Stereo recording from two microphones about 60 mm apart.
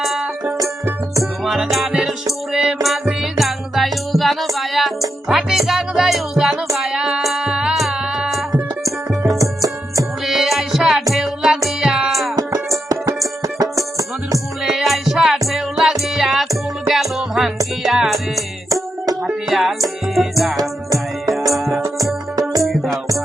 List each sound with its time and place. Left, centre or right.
0.0 s music: centre
9.4 s music: right
10.2 s music: centre
12.7 s music: right
13.4 s music: right
14.6 s music: centre
19.5 s music: centre
20.6 s music: right
21.5 s music: centre
21.9 s music: right
22.6 s music: centre